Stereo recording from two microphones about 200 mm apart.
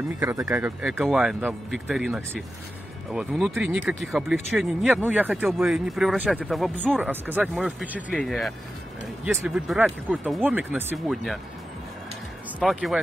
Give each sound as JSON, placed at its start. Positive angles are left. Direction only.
{"t": 0.2, "sound": "speech", "side_deg": -15}
{"t": 0.5, "sound": "speech", "side_deg": -5}
{"t": 12.5, "sound": "speech", "side_deg": 0}